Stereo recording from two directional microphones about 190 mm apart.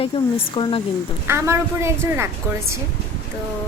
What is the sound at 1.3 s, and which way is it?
A woman's voice, 15° right (ahead or behind).